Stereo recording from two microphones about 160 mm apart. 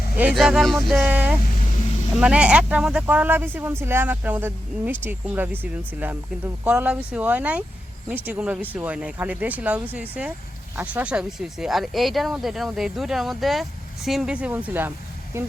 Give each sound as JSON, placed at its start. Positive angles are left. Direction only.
{"t": 0.2, "sound": "speech", "side_deg": -5}
{"t": 6.7, "sound": "speech", "side_deg": -10}